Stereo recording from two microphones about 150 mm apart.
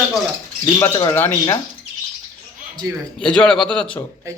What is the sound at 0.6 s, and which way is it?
Speech, 25° left (ahead or behind).